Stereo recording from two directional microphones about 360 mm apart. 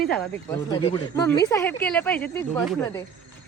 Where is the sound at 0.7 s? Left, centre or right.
Centre.